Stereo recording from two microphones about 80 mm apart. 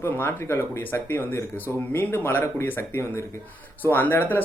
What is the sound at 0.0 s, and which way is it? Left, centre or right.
Speech, left.